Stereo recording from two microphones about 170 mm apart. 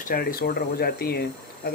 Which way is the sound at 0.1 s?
60° left (ahead or behind).